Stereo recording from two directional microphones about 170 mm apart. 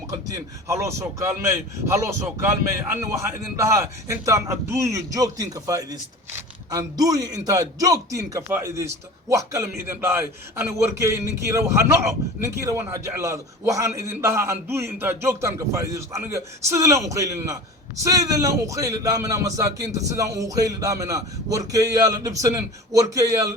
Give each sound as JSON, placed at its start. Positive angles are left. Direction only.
{"t": 0.1, "sound": "a man's voice", "side_deg": -20}